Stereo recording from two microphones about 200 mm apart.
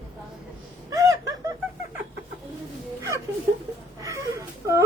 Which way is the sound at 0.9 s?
20° right (ahead or behind).